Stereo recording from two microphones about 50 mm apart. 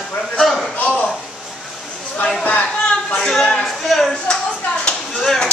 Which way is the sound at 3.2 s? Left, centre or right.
Centre.